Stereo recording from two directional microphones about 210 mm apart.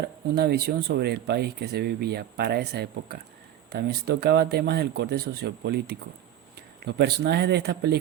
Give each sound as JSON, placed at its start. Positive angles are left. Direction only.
{"t": 0.3, "sound": "speech", "side_deg": -50}